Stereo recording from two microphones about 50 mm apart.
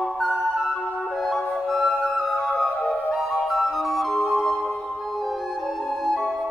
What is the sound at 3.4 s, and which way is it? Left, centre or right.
Music, centre.